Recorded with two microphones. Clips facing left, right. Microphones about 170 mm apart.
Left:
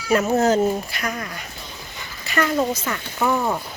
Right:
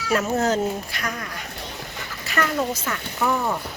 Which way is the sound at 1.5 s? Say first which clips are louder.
Right 3 dB; 70° right (ahead or behind).